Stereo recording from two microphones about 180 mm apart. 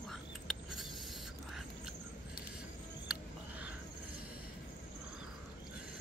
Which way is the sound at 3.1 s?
5° right (ahead or behind).